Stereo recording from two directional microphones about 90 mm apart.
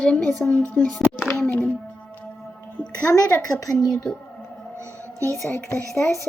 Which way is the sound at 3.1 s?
35° left (ahead or behind).